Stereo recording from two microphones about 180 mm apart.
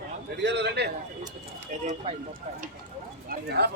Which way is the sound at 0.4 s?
70° right (ahead or behind).